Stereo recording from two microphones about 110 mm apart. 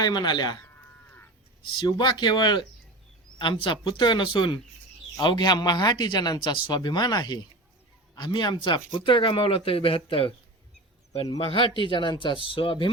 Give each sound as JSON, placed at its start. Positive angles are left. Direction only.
{"t": 0.0, "sound": "speech", "side_deg": 40}
{"t": 1.8, "sound": "speech", "side_deg": 45}
{"t": 11.3, "sound": "speech", "side_deg": 55}